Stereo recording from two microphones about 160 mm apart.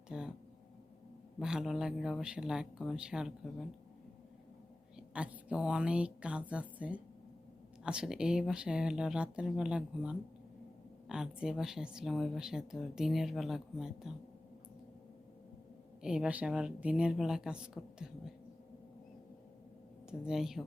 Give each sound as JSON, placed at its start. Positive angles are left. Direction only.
{"t": 0.1, "sound": "speech", "side_deg": -5}
{"t": 1.4, "sound": "speech", "side_deg": -5}
{"t": 4.9, "sound": "a woman's voice", "side_deg": -5}
{"t": 16.0, "sound": "speech", "side_deg": -5}
{"t": 20.1, "sound": "speech", "side_deg": -5}